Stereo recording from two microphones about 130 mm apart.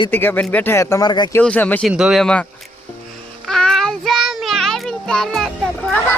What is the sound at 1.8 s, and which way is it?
Speech, 5° right (ahead or behind).